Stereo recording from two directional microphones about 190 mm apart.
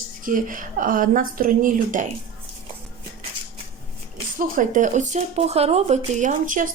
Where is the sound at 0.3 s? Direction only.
45° right (ahead or behind).